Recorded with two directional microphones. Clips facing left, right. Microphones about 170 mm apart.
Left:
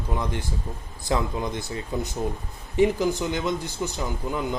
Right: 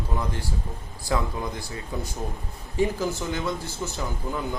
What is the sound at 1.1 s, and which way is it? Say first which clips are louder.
A man's voice: left 2 dB; 20° left (ahead or behind).